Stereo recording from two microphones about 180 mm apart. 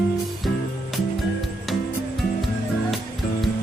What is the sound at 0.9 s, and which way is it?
Music, centre (ahead or behind).